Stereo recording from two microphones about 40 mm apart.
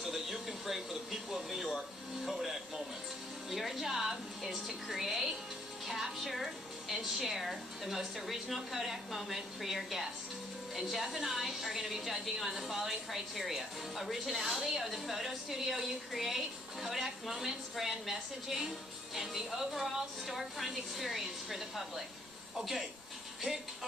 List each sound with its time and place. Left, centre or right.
0.0 s a sound: centre
3.4 s music: centre
5.9 s a woman's voice: centre
23.4 s a woman's voice: centre